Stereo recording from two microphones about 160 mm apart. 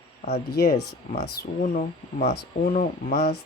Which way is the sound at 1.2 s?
55° left (ahead or behind).